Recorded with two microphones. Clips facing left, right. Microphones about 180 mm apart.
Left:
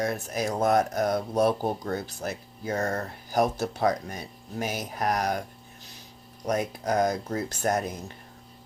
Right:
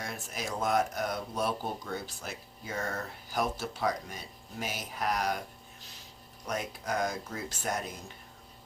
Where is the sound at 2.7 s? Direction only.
40° left (ahead or behind).